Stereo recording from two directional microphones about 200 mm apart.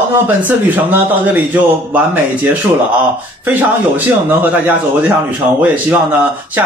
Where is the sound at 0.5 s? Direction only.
10° right (ahead or behind).